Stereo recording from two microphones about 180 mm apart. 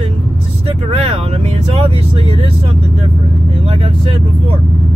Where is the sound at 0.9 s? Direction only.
35° right (ahead or behind).